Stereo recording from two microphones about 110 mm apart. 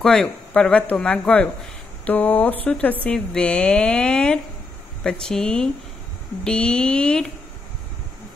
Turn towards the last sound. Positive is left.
turn(degrees=10)  # may be behind; listen again after turning